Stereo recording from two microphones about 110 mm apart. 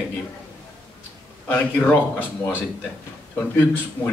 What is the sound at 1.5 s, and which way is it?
A man's voice, 15° left (ahead or behind).